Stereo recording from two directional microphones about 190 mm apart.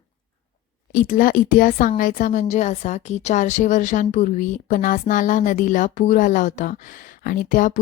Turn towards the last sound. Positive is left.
turn(degrees=45)  # may be behind; listen again after turning